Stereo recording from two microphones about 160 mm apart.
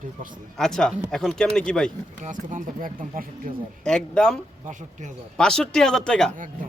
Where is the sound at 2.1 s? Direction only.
55° right (ahead or behind).